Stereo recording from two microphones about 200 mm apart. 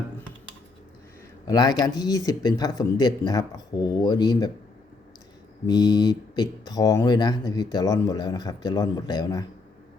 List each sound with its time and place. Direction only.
1.5 s speech: 20° left (ahead or behind)
5.6 s speech: 20° left (ahead or behind)